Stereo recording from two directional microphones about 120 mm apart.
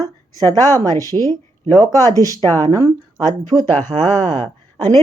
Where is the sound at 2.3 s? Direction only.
25° left (ahead or behind).